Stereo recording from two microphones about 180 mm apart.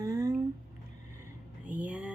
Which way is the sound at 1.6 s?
10° right (ahead or behind).